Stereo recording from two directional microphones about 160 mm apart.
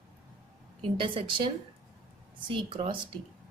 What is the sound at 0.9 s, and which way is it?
Speech, 35° right (ahead or behind).